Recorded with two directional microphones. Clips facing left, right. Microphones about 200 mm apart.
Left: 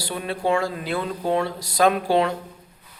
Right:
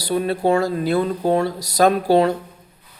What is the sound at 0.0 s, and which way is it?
Speech, 40° right (ahead or behind).